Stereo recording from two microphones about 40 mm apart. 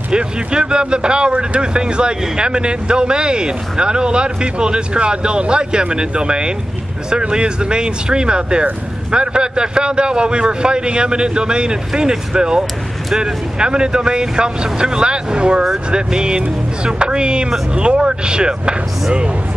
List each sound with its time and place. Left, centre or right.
0.1 s speech: right